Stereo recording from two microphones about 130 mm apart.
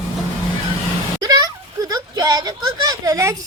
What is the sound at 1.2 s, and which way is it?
A woman's voice, 30° right (ahead or behind).